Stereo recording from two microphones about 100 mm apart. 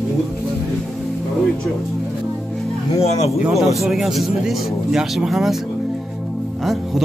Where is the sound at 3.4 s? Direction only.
Centre (ahead or behind).